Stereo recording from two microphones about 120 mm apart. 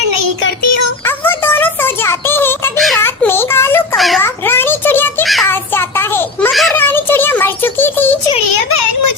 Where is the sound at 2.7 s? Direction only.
Centre (ahead or behind).